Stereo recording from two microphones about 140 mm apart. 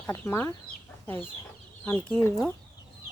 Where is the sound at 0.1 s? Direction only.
15° left (ahead or behind).